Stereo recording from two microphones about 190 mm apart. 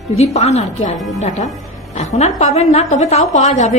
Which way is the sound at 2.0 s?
35° left (ahead or behind).